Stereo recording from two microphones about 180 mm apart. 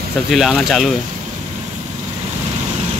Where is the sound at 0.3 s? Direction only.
Centre (ahead or behind).